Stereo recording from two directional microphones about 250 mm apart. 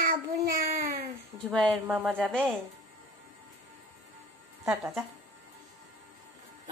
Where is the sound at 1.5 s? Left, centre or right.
Centre.